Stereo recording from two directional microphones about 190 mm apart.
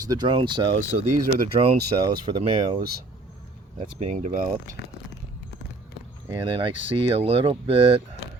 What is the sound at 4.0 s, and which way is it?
Speech, 40° right (ahead or behind).